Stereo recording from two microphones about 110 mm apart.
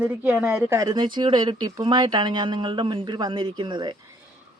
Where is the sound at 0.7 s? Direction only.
30° right (ahead or behind).